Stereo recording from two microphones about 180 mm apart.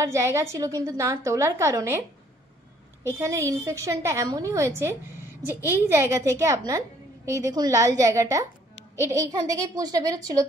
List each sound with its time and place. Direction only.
0.0 s a woman's voice: 15° right (ahead or behind)